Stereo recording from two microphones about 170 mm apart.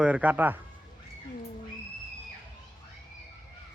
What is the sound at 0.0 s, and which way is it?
Speech, 10° right (ahead or behind).